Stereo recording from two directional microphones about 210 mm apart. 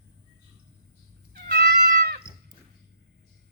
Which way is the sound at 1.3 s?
45° right (ahead or behind).